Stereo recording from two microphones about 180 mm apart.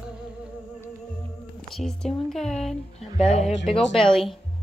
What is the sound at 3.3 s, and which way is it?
Speech, 35° left (ahead or behind).